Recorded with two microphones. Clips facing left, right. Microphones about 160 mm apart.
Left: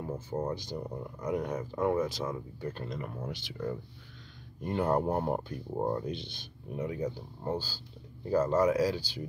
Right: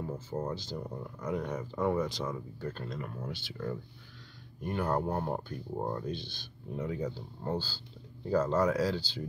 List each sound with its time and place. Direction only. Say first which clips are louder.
0.0 s speech: left 2 dB; 15° left (ahead or behind)